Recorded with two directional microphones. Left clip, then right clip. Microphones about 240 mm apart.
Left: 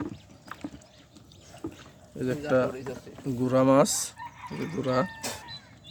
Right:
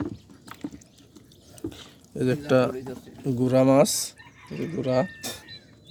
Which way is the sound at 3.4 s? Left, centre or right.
Centre.